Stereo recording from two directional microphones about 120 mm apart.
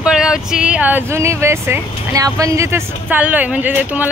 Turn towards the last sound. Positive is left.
turn(degrees=-15)  # may be behind; listen again after turning